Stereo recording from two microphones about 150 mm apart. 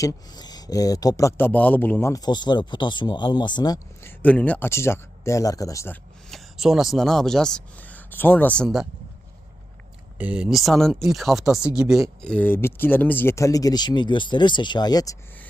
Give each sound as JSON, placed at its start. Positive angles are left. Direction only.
{"t": 0.0, "sound": "speech", "side_deg": 25}
{"t": 4.0, "sound": "speech", "side_deg": 10}
{"t": 6.3, "sound": "speech", "side_deg": -5}
{"t": 10.2, "sound": "speech", "side_deg": -10}
{"t": 12.2, "sound": "speech", "side_deg": 10}